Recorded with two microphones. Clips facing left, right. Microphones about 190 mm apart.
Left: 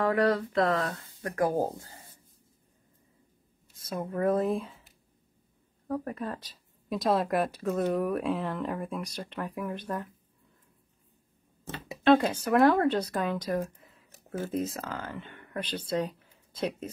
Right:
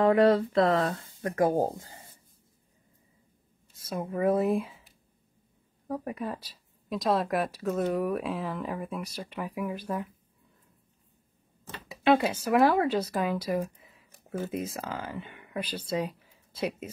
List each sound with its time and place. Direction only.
0.0 s speech: 25° right (ahead or behind)
3.7 s speech: 10° right (ahead or behind)
5.9 s speech: 10° right (ahead or behind)
12.0 s speech: 10° right (ahead or behind)
14.1 s a sound: 5° left (ahead or behind)
14.5 s speech: 10° right (ahead or behind)